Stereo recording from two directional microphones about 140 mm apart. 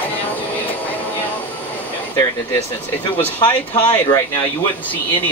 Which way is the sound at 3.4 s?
35° left (ahead or behind).